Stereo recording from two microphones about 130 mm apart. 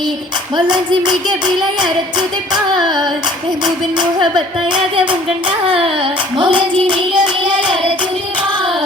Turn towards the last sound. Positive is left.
turn(degrees=-35)  # may be behind; listen again after turning